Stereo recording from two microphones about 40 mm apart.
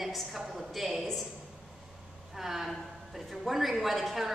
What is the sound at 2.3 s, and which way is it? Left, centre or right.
Speech, centre.